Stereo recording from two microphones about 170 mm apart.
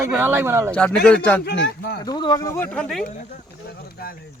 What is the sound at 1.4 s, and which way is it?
Speech, 75° left (ahead or behind).